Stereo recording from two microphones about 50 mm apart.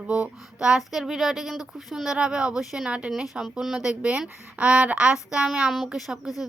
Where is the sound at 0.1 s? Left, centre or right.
Right.